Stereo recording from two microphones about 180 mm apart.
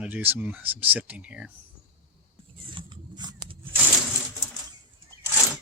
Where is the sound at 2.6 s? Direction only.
25° right (ahead or behind).